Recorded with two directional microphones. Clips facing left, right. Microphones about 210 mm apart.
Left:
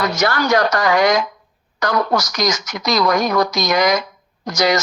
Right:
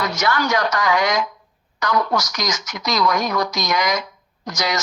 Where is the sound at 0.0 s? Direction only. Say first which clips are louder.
Left 3 dB; 35° left (ahead or behind).